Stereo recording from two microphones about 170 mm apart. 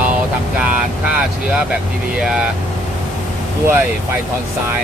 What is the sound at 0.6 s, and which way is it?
Speech, 5° right (ahead or behind).